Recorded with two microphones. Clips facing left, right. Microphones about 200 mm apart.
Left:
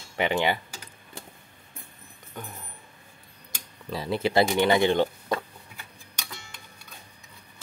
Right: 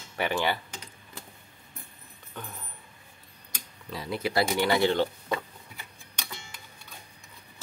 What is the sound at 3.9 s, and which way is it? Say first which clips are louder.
Speech: left 5 dB; 30° left (ahead or behind).